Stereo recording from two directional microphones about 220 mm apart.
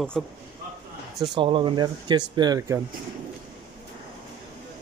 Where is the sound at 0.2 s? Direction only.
Centre (ahead or behind).